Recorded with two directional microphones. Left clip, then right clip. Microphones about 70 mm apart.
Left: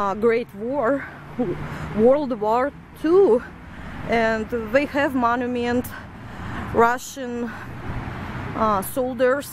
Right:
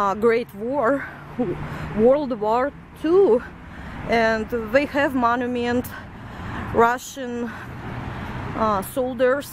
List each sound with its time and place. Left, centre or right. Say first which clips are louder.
0.0 s speech: right 1 dB; centre
1.8 s speech: even; centre
4.1 s a woman's voice: right 1 dB; centre
8.5 s speech: left 1 dB; centre